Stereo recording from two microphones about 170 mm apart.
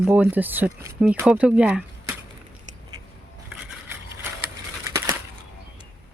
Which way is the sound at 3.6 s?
5° right (ahead or behind).